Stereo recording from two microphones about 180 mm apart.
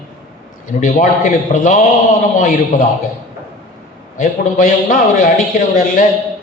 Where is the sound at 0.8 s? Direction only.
45° left (ahead or behind).